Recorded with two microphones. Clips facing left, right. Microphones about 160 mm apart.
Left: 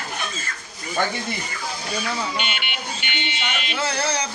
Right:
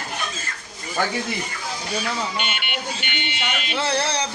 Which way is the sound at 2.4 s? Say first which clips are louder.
Even; 50° right (ahead or behind).